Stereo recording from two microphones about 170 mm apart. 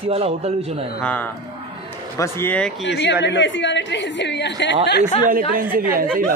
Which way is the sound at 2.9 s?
90° left.